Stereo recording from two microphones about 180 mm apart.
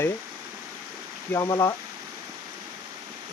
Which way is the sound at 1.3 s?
15° left (ahead or behind).